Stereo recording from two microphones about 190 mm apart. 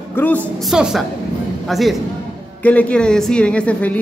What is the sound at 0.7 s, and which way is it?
A woman's voice, centre (ahead or behind).